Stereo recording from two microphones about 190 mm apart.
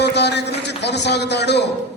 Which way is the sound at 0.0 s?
60° left (ahead or behind).